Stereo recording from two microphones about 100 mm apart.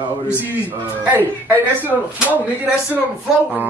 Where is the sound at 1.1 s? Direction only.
20° right (ahead or behind).